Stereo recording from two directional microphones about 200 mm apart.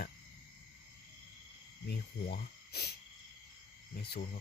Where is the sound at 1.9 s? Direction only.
50° left (ahead or behind).